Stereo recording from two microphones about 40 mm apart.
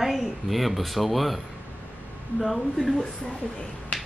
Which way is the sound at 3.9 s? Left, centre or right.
Left.